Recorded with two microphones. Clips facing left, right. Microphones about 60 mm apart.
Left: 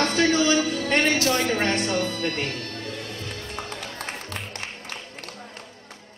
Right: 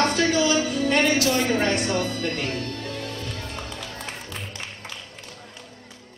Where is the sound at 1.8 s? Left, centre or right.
Right.